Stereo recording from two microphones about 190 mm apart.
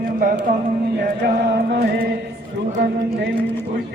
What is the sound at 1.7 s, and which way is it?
Chant, 60° right (ahead or behind).